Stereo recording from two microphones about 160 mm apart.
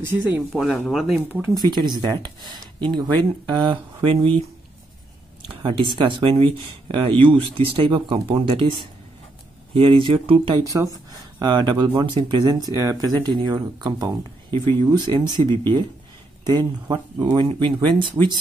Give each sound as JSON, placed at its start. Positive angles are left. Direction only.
{"t": 0.0, "sound": "speech", "side_deg": -15}
{"t": 0.5, "sound": "speech", "side_deg": 0}
{"t": 1.3, "sound": "speech", "side_deg": -15}
{"t": 1.6, "sound": "speech", "side_deg": -25}
{"t": 9.8, "sound": "speech", "side_deg": -35}